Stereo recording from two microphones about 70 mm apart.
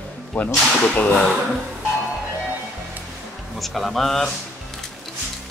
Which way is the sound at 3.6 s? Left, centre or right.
Centre.